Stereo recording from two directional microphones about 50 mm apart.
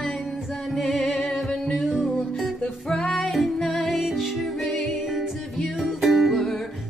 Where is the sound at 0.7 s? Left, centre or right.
Centre.